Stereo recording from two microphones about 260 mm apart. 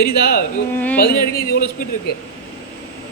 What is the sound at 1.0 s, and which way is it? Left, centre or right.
A man's voice, left.